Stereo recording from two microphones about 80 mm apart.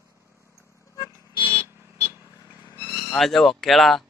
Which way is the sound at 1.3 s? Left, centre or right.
Left.